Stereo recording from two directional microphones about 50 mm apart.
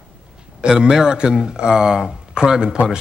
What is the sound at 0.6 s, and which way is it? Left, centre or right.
A man's voice, centre.